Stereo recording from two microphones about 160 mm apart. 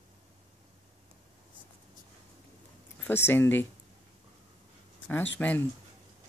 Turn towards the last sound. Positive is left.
turn(degrees=10)  # may be behind; listen again after turning